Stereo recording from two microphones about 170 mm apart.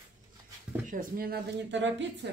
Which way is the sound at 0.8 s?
55° right (ahead or behind).